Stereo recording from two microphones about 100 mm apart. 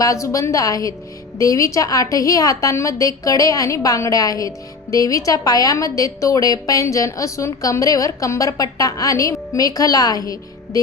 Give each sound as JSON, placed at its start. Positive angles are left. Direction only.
{"t": 0.0, "sound": "a woman's voice", "side_deg": 35}